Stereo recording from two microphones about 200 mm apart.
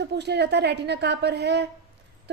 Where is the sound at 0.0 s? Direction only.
55° right (ahead or behind).